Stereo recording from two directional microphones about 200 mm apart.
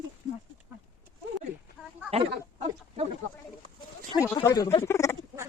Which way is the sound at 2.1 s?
30° right (ahead or behind).